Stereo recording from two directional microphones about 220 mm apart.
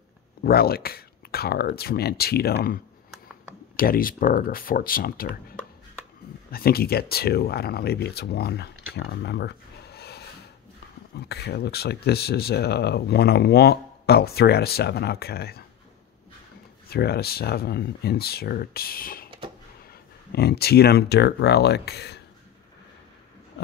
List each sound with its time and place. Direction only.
0.4 s speech: 45° left (ahead or behind)
16.9 s speech: 45° left (ahead or behind)